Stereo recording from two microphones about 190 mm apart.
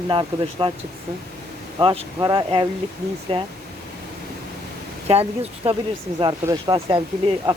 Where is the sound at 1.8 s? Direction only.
25° right (ahead or behind).